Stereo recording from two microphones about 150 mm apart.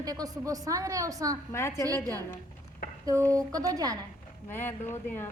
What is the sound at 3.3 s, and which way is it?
Speech, 20° right (ahead or behind).